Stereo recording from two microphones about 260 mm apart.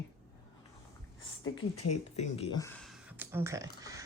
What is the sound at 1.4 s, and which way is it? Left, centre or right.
Speech, left.